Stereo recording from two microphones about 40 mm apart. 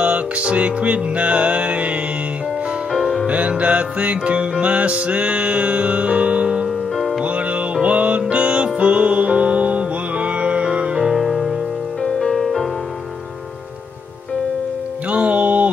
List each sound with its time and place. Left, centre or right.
0.0 s music: right
2.9 s music: centre
3.3 s music: right
11.0 s music: centre
12.0 s music: centre
15.0 s music: right